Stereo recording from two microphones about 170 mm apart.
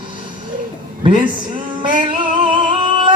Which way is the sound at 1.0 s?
30° right (ahead or behind).